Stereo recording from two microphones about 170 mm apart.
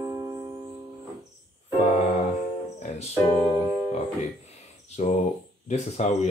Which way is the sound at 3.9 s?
40° left (ahead or behind).